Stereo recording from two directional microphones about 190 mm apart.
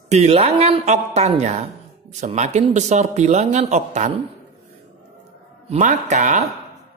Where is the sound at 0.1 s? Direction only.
35° right (ahead or behind).